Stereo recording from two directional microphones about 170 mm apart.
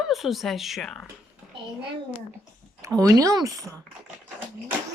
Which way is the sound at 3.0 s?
20° right (ahead or behind).